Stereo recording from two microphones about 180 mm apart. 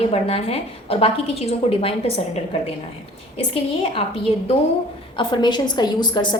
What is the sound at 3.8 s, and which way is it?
Speech, 30° left (ahead or behind).